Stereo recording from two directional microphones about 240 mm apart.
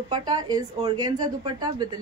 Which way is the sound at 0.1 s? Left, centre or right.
Centre.